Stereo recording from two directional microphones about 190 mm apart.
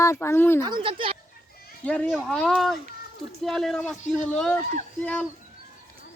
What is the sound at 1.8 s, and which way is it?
Speech, 5° left (ahead or behind).